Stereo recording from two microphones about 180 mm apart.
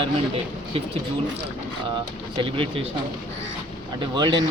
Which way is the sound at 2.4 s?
30° right (ahead or behind).